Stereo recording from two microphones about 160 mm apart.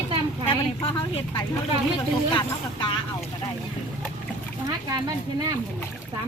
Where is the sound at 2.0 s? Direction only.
30° left (ahead or behind).